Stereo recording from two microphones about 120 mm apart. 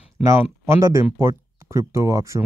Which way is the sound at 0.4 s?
20° right (ahead or behind).